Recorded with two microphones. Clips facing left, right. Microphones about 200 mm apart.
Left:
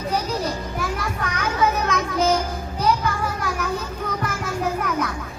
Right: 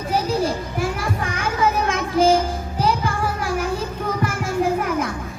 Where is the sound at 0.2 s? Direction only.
30° right (ahead or behind).